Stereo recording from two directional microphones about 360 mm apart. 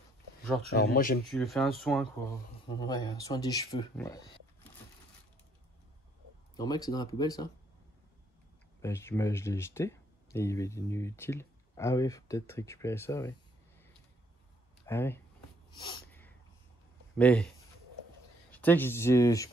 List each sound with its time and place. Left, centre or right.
0.7 s speech: left
1.3 s speech: centre
6.5 s speech: centre
8.8 s speech: centre
14.9 s speech: centre
15.8 s sneeze: centre
17.2 s speech: centre
18.5 s speech: centre